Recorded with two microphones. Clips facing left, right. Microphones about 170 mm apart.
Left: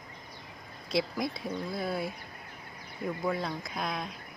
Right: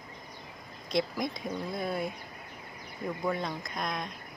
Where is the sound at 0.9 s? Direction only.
5° left (ahead or behind).